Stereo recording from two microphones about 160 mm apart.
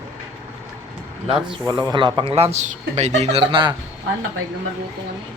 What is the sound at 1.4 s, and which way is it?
Speech, 25° right (ahead or behind).